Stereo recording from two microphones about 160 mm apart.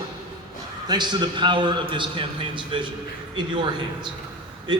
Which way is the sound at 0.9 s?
30° right (ahead or behind).